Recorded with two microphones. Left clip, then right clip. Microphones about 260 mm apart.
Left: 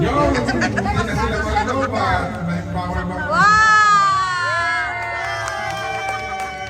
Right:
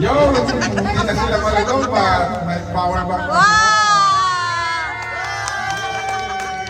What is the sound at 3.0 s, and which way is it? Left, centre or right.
Baby cry, right.